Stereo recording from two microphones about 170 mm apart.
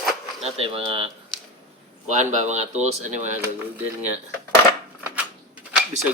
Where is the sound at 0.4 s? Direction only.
35° right (ahead or behind).